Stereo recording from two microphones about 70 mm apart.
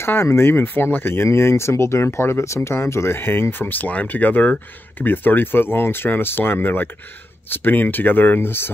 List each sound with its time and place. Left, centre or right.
0.0 s speech: left